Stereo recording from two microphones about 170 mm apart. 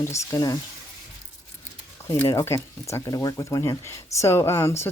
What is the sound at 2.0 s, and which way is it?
A woman's voice, 15° left (ahead or behind).